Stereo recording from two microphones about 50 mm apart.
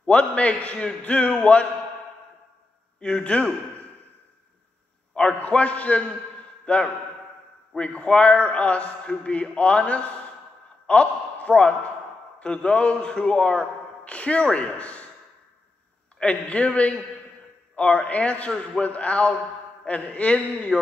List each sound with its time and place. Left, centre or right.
0.0 s a man's voice: left
3.0 s a man's voice: centre
5.1 s a man's voice: centre
16.2 s a man's voice: left
20.7 s music: centre